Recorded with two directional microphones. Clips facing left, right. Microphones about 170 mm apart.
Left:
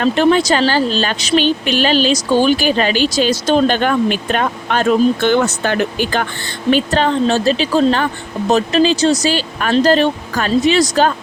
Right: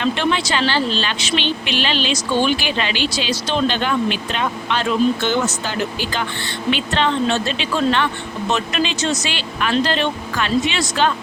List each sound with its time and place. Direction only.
0.0 s speech: 45° left (ahead or behind)